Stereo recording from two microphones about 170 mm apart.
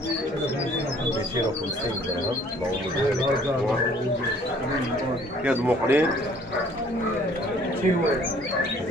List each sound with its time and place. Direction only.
5.4 s speech: 10° right (ahead or behind)